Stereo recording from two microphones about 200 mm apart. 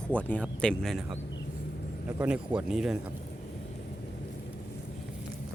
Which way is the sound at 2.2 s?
5° right (ahead or behind).